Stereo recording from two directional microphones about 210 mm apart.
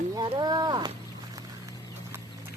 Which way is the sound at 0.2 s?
20° right (ahead or behind).